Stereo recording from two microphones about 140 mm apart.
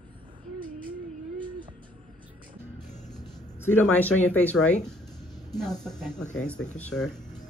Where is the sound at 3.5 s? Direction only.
15° left (ahead or behind).